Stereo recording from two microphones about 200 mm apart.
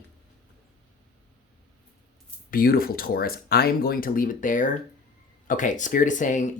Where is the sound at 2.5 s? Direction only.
45° left (ahead or behind).